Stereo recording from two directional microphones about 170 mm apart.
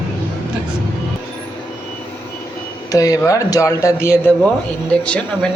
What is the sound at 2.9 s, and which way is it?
Speech, 20° left (ahead or behind).